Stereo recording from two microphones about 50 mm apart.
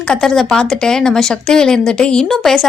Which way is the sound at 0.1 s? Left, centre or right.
Centre.